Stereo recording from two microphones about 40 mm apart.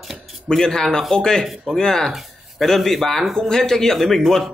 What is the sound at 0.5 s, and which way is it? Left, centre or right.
Speech, centre.